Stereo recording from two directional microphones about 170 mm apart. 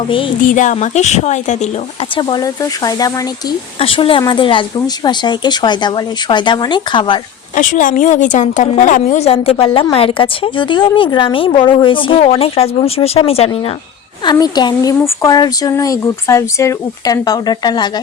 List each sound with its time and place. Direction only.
0.4 s speech: 50° left (ahead or behind)
2.1 s speech: 25° left (ahead or behind)
3.8 s a woman's voice: 35° left (ahead or behind)
7.5 s a woman's voice: 50° left (ahead or behind)
14.3 s speech: 25° left (ahead or behind)